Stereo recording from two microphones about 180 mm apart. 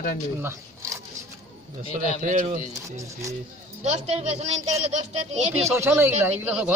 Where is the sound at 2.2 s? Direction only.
45° right (ahead or behind).